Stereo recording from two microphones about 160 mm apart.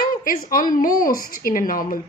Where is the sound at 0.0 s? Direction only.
60° left (ahead or behind).